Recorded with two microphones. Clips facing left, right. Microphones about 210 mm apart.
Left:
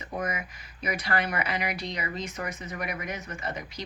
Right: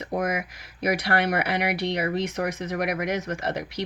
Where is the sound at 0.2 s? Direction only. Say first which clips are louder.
Right 4 dB; 75° right (ahead or behind).